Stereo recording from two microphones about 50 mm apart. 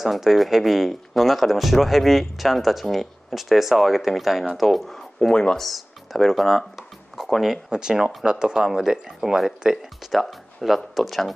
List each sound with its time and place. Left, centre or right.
0.0 s speech: centre
5.3 s speech: centre
5.6 s speech: centre